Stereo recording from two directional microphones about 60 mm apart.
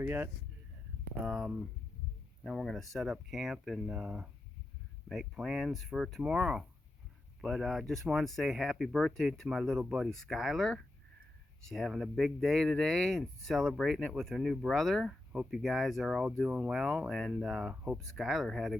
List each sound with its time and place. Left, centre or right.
0.0 s speech: right
1.2 s speech: centre
2.5 s speech: centre
7.4 s speech: centre
17.9 s speech: centre